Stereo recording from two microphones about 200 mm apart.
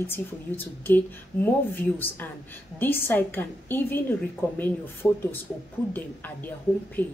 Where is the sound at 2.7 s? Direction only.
10° left (ahead or behind).